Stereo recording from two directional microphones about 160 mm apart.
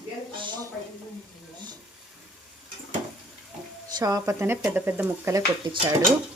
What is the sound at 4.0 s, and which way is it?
A woman's voice, 25° right (ahead or behind).